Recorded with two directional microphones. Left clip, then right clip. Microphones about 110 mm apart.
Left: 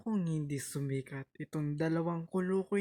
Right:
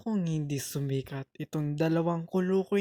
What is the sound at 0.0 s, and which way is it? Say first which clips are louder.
Speech: right 4 dB; 15° right (ahead or behind).